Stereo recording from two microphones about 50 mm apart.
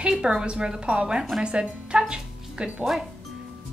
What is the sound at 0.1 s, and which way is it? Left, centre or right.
A woman's voice, centre.